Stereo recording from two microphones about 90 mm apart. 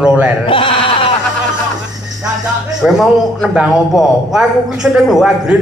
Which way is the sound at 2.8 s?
5° right (ahead or behind).